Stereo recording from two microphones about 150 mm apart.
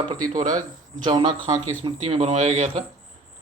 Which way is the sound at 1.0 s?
30° right (ahead or behind).